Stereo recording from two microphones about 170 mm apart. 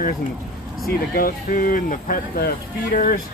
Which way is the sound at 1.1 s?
60° left (ahead or behind).